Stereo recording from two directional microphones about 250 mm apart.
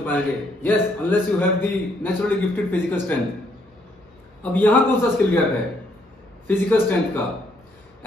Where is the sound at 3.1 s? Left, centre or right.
Centre.